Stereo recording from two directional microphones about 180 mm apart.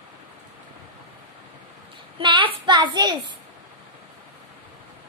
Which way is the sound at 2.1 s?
30° right (ahead or behind).